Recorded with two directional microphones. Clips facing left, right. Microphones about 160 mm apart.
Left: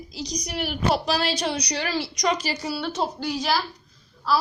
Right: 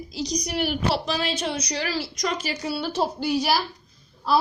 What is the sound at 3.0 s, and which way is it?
Speech, 10° right (ahead or behind).